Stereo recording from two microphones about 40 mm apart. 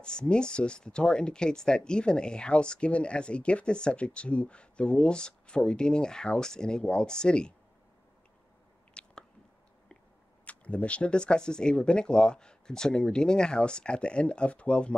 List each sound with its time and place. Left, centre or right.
0.0 s speech: left
9.0 s biting: left
10.4 s speech: left